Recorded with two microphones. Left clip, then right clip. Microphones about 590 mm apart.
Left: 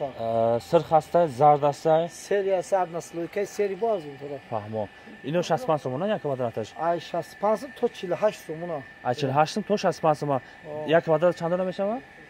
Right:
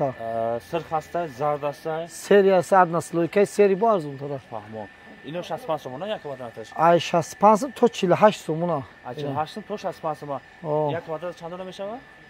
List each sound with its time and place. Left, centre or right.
0.2 s speech: centre
2.2 s speech: right
4.5 s speech: left
6.8 s speech: right
9.0 s speech: left
10.9 s speech: left